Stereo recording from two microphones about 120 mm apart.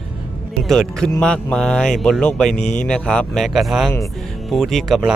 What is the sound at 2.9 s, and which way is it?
Speech, 5° left (ahead or behind).